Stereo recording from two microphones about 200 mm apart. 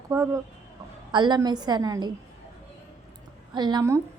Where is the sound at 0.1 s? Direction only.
15° right (ahead or behind).